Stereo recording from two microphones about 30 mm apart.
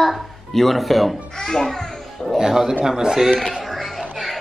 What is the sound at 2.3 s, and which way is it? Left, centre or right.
Speech, centre.